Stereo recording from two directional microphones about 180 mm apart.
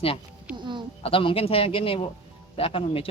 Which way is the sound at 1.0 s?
30° left (ahead or behind).